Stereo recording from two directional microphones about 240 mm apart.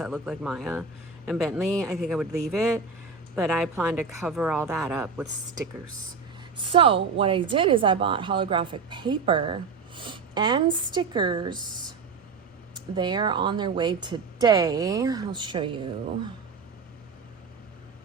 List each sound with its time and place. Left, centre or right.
0.0 s a woman's voice: centre
6.6 s speech: right
12.7 s a woman's voice: centre